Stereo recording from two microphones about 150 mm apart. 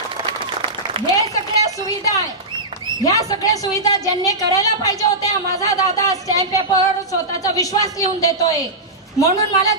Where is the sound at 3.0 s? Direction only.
25° left (ahead or behind).